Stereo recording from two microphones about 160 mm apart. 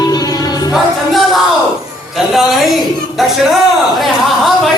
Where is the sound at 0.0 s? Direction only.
25° left (ahead or behind).